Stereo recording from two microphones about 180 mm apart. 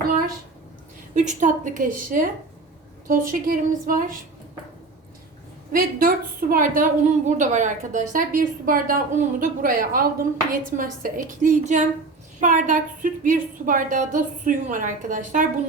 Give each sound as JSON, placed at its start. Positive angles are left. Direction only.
{"t": 1.1, "sound": "a woman's voice", "side_deg": -40}
{"t": 5.7, "sound": "a woman's voice", "side_deg": -50}